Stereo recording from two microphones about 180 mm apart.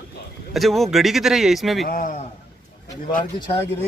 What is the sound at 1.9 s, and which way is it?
Speech, 50° left (ahead or behind).